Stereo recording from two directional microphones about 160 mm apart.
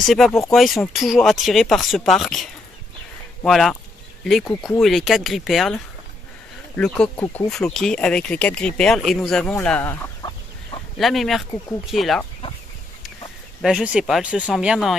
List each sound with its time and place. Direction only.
0.0 s speech: centre (ahead or behind)
6.8 s speech: 5° left (ahead or behind)
10.2 s chicken: 30° left (ahead or behind)
11.0 s speech: centre (ahead or behind)
13.6 s speech: 5° right (ahead or behind)